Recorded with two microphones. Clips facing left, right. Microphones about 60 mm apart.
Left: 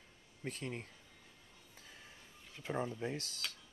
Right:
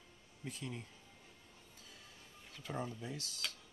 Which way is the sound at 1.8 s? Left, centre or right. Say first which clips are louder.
Left 3 dB; left.